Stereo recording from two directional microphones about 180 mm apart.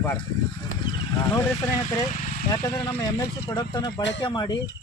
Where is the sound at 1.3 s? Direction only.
20° left (ahead or behind).